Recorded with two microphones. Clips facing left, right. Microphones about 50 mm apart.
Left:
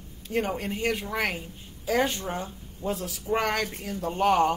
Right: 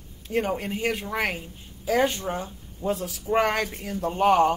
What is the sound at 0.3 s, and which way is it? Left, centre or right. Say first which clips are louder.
A woman's voice: right 2 dB; centre.